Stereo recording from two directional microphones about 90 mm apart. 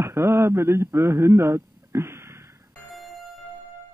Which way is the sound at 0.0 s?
30° right (ahead or behind).